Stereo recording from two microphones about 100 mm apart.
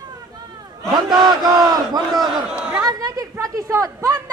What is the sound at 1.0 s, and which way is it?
Speech, 45° right (ahead or behind).